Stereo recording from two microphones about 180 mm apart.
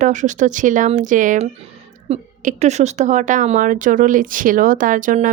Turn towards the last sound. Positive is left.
turn(degrees=-45)  # may be behind; listen again after turning